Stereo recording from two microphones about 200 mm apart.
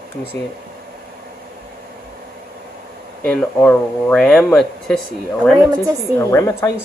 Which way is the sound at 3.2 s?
5° left (ahead or behind).